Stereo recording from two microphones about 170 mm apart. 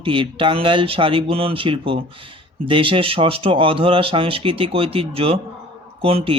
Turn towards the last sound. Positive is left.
turn(degrees=-35)  # may be behind; listen again after turning